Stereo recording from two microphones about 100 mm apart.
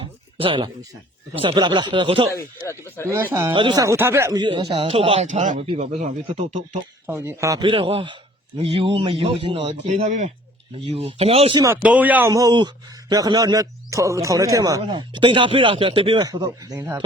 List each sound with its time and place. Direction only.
0.0 s a sound: 60° right (ahead or behind)
1.4 s speech: 50° right (ahead or behind)
2.3 s speech: 30° left (ahead or behind)
3.5 s a man's voice: 60° right (ahead or behind)
3.8 s speech: 25° right (ahead or behind)
4.4 s speech: 50° right (ahead or behind)
4.7 s speech: 75° right (ahead or behind); by 6.4 s 90° right
7.1 s speech: 25° right (ahead or behind)
7.6 s a man's voice: 60° right (ahead or behind)
10.8 s speech: 75° right (ahead or behind)
11.8 s speech: 15° right (ahead or behind)
12.3 s speech: 35° right (ahead or behind)
14.8 s a man's voice: 50° right (ahead or behind)
16.2 s speech: 40° right (ahead or behind)